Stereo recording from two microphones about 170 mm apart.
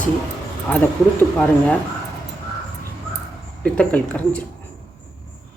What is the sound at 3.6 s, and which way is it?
Speech, 5° left (ahead or behind).